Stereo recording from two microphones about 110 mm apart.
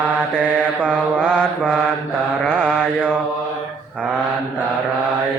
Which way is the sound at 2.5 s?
15° left (ahead or behind).